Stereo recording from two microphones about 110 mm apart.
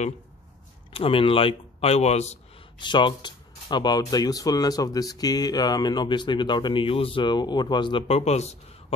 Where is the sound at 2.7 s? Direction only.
45° left (ahead or behind).